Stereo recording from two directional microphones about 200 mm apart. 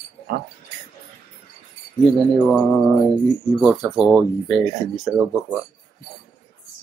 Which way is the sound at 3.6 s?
5° right (ahead or behind).